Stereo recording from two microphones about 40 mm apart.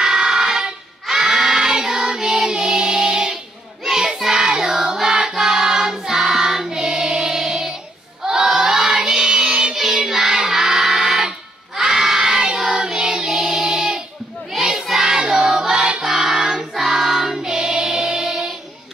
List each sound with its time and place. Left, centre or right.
0.0 s a sound: centre
1.0 s child singing: centre
3.8 s choir: centre
6.8 s music: centre
8.2 s child singing: centre